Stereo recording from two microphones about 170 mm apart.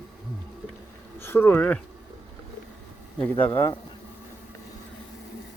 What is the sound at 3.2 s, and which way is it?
Speech, 10° left (ahead or behind).